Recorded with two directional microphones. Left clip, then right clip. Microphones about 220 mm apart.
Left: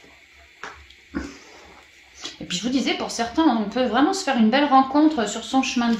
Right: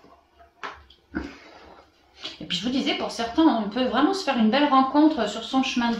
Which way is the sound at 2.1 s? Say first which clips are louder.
Even; 40° left (ahead or behind).